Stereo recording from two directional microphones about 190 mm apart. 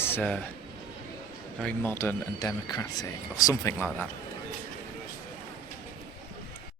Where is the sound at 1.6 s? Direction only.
10° left (ahead or behind).